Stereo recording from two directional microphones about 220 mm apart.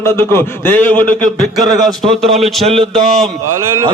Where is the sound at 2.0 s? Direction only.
25° right (ahead or behind).